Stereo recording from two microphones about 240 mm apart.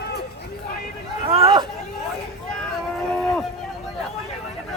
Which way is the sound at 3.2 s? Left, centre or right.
Centre.